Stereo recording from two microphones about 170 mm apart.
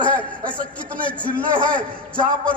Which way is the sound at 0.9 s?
10° left (ahead or behind).